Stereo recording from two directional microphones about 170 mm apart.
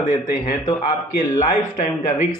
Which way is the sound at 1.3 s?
45° left (ahead or behind).